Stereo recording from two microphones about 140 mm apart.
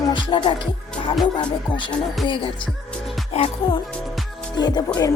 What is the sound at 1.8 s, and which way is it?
Music, centre (ahead or behind).